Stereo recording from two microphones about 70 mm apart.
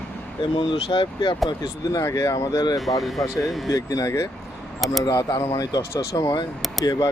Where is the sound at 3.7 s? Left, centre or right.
Left.